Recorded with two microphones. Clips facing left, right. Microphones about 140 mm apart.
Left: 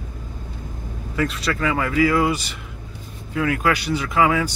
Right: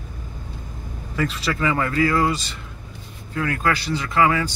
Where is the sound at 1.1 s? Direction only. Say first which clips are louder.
Left 1 dB; centre (ahead or behind).